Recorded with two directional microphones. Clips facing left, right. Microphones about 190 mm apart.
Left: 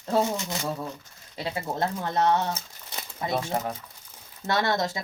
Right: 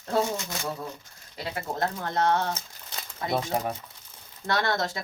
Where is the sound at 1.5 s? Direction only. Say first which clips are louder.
Left 1 dB; 25° left (ahead or behind).